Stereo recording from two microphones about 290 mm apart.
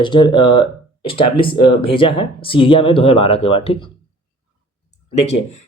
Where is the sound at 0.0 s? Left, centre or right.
Centre.